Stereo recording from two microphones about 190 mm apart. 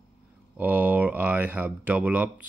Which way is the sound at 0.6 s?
10° right (ahead or behind).